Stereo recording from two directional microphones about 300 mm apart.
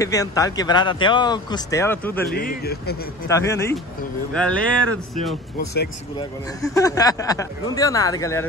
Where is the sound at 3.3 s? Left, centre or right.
Centre.